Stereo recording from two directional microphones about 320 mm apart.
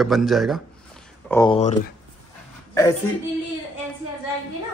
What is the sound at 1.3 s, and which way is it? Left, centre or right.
Speech, centre.